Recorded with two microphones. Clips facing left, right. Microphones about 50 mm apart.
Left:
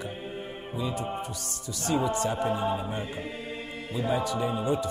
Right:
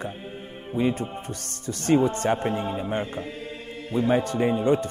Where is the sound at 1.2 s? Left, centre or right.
Right.